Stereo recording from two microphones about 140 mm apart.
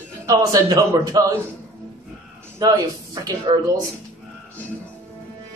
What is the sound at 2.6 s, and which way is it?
A man's voice, 25° right (ahead or behind).